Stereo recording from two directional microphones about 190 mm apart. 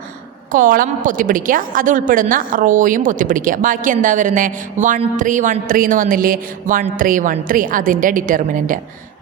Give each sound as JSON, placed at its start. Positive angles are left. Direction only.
{"t": 0.5, "sound": "a woman's voice", "side_deg": -45}